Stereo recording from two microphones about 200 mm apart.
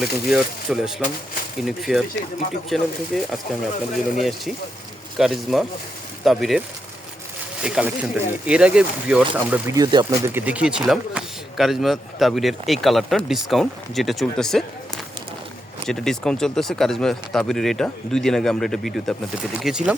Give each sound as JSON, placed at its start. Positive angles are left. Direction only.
{"t": 0.0, "sound": "speech", "side_deg": 0}
{"t": 7.6, "sound": "speech", "side_deg": -5}
{"t": 9.7, "sound": "speech", "side_deg": -20}
{"t": 10.3, "sound": "speech", "side_deg": -5}
{"t": 15.9, "sound": "speech", "side_deg": 5}